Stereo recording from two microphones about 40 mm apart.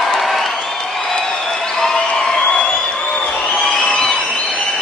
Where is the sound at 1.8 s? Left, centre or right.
Centre.